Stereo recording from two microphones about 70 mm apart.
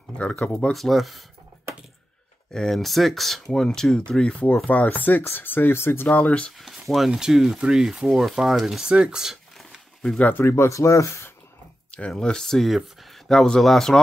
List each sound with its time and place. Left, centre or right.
0.2 s speech: centre
0.7 s speech: centre
2.5 s speech: centre
6.6 s speech: centre
9.6 s a sound: centre
10.1 s speech: left
10.4 s speech: left
12.1 s speech: centre